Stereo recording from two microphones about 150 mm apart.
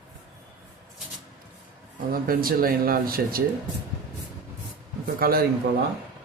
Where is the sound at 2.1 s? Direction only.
80° right.